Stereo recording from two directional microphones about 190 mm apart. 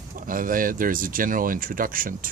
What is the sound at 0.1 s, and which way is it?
Speech, 45° right (ahead or behind).